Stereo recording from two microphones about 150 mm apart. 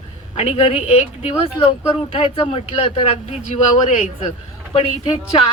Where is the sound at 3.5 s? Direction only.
45° left (ahead or behind).